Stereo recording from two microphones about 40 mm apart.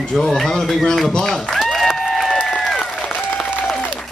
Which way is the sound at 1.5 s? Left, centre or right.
Centre.